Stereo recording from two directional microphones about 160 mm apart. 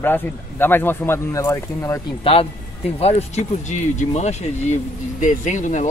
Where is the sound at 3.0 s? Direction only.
40° left (ahead or behind).